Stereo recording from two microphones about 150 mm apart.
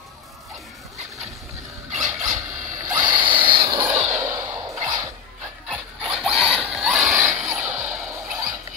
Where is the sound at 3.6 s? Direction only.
20° right (ahead or behind).